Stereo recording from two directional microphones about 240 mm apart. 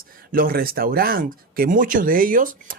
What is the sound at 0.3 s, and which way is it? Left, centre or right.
Speech, right.